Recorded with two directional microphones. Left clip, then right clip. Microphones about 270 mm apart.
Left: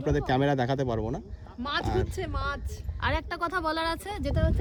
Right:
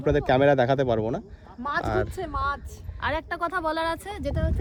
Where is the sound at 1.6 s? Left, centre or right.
Centre.